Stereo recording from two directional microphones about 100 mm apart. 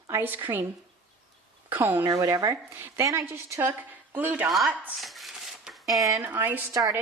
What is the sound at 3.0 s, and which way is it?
A woman's voice, 35° right (ahead or behind).